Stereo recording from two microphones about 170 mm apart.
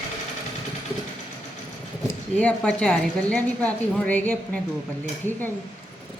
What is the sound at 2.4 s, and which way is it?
A woman's voice, 5° left (ahead or behind).